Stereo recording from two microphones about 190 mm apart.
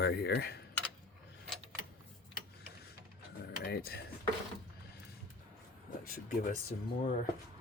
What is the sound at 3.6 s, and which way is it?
Speech, 55° left (ahead or behind).